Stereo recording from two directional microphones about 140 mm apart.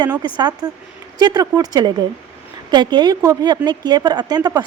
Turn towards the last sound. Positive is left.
turn(degrees=-30)  # may be behind; listen again after turning